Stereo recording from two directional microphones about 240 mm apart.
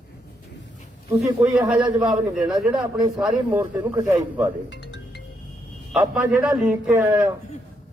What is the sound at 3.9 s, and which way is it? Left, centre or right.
Speech, centre.